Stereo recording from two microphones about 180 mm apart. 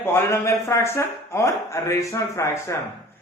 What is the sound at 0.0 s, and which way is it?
Speech, 10° left (ahead or behind).